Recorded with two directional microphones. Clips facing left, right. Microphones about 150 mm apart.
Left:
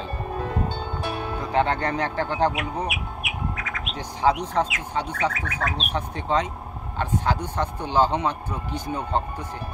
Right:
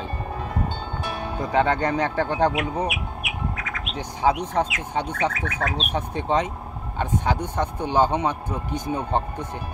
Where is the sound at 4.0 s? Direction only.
15° right (ahead or behind).